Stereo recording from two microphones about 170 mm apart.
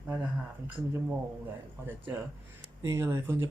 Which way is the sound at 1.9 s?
10° right (ahead or behind).